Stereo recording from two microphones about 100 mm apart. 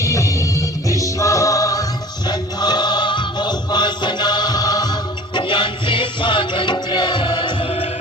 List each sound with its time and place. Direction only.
0.0 s music: 35° left (ahead or behind)
2.2 s music: 45° left (ahead or behind); by 7.9 s 65° left (ahead or behind)